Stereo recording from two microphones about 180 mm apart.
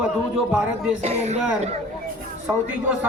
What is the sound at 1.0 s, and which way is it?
Speech, 35° right (ahead or behind).